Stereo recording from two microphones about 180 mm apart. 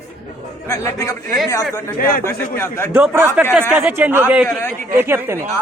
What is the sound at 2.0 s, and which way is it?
Speech, 55° left (ahead or behind).